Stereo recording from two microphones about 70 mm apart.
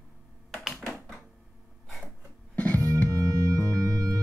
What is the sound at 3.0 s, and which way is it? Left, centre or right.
Music, right.